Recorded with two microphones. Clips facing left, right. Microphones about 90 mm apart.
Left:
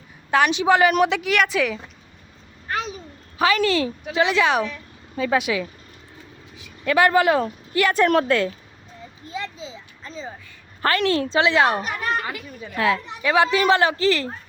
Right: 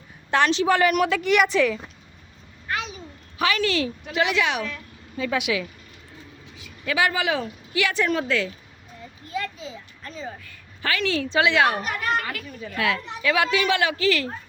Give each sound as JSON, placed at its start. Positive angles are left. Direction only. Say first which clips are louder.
{"t": 0.3, "sound": "a woman's voice", "louder": "left 2 dB", "side_deg": 10}
{"t": 1.2, "sound": "a woman's voice", "louder": "right 1 dB", "side_deg": 0}
{"t": 2.6, "sound": "a sound", "louder": "left 2 dB", "side_deg": 35}
{"t": 3.3, "sound": "a woman's voice", "louder": "left 4 dB", "side_deg": 35}
{"t": 6.8, "sound": "speech", "louder": "left 6 dB", "side_deg": 50}
{"t": 9.2, "sound": "a sound", "louder": "right 1 dB", "side_deg": 25}
{"t": 10.8, "sound": "speech", "louder": "left 5 dB", "side_deg": 50}
{"t": 11.3, "sound": "a woman's voice", "louder": "left 1 dB", "side_deg": 30}
{"t": 12.7, "sound": "a woman's voice", "louder": "left 4 dB", "side_deg": 30}